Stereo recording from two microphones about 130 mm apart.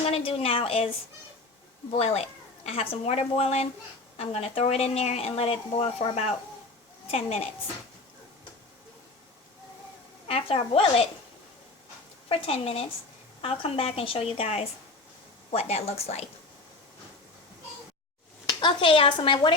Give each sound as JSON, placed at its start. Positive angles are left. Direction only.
{"t": 0.0, "sound": "speech", "side_deg": 50}
{"t": 2.6, "sound": "speech", "side_deg": 50}
{"t": 10.2, "sound": "speech", "side_deg": 50}
{"t": 12.3, "sound": "speech", "side_deg": 50}
{"t": 18.4, "sound": "speech", "side_deg": 40}